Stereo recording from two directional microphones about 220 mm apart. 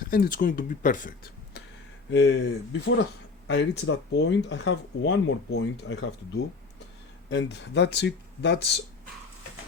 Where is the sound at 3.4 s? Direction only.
55° left (ahead or behind).